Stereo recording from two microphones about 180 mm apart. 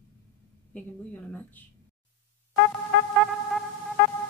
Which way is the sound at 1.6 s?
10° left (ahead or behind).